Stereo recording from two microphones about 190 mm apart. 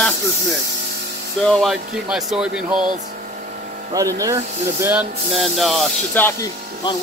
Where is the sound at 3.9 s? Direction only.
20° right (ahead or behind); by 6.5 s 10° left (ahead or behind).